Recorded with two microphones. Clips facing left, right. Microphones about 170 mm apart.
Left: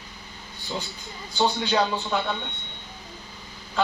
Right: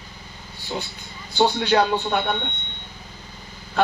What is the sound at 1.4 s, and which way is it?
Speech, 65° right (ahead or behind).